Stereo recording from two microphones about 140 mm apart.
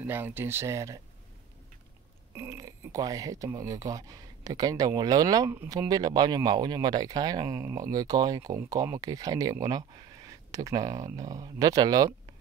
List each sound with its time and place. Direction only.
0.0 s speech: 15° right (ahead or behind)
2.3 s speech: 20° right (ahead or behind)